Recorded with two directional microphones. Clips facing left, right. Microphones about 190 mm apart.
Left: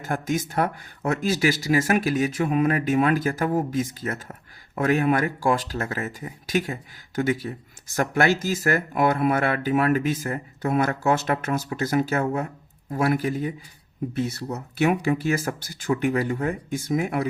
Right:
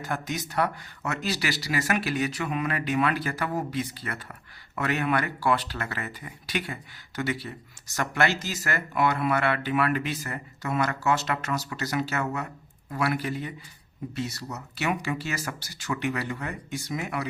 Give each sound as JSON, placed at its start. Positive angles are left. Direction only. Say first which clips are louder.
{"t": 0.0, "sound": "speech", "louder": "left 6 dB", "side_deg": 50}